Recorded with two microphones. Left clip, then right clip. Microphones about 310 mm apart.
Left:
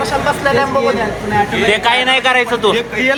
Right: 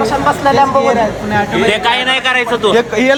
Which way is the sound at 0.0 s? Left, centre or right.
Right.